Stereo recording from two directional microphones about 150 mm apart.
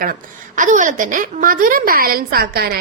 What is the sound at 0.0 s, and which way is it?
A woman's voice, 65° right (ahead or behind).